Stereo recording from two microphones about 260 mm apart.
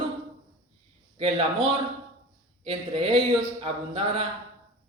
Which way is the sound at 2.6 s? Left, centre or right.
Right.